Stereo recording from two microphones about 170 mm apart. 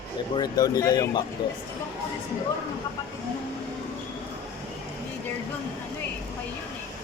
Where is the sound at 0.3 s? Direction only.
20° left (ahead or behind).